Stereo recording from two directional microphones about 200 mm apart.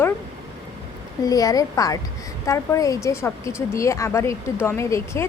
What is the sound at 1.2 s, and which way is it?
Speech, 15° left (ahead or behind).